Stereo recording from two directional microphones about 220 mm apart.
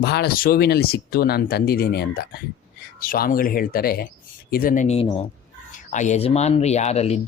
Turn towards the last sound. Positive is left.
turn(degrees=30)  # may be behind; listen again after turning